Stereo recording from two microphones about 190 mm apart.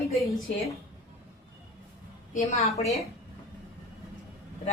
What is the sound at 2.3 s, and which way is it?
Speech, 35° left (ahead or behind).